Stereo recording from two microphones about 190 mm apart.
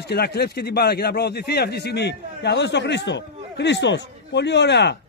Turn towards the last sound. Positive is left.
turn(degrees=65)  # may be behind; listen again after turning